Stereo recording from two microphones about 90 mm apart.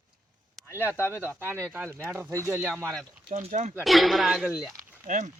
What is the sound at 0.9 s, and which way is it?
Speech, 30° left (ahead or behind).